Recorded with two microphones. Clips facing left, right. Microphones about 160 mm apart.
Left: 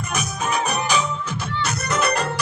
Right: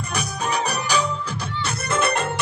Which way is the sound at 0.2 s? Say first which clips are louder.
Even; 35° right (ahead or behind).